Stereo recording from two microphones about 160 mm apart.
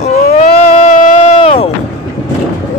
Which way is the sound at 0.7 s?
45° left (ahead or behind).